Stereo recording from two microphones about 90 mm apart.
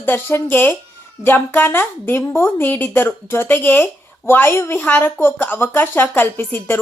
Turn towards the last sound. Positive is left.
turn(degrees=25)  # may be behind; listen again after turning